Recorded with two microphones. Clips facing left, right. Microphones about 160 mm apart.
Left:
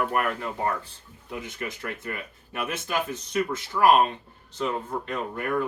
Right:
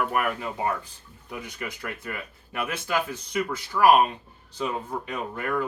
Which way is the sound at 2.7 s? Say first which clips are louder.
Right 1 dB; 20° left (ahead or behind).